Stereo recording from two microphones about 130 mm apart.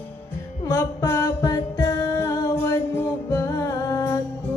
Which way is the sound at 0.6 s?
25° left (ahead or behind).